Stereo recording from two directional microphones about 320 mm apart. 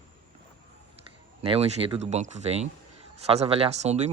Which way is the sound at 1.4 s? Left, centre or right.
Centre.